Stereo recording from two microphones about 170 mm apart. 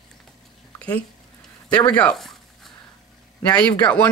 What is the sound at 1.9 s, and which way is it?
Speech, 5° left (ahead or behind).